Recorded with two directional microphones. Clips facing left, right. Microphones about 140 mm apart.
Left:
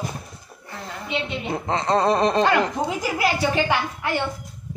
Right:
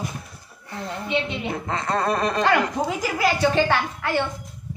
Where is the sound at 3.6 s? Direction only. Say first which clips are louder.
Right 1 dB; 10° left (ahead or behind).